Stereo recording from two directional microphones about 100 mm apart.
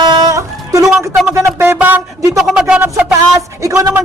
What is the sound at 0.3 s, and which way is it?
Music, 30° right (ahead or behind).